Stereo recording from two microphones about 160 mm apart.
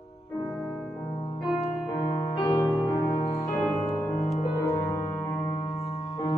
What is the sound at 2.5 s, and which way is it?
Music, centre (ahead or behind).